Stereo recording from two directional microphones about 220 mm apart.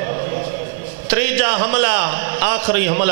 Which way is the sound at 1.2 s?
10° right (ahead or behind).